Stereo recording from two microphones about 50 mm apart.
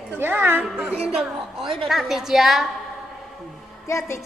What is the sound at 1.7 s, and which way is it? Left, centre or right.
Speech, centre.